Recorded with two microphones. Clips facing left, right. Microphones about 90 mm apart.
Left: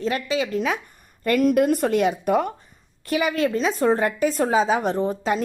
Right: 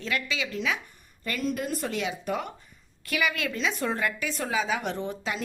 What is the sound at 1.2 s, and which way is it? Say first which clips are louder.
A woman's voice: left 12 dB; 55° left (ahead or behind).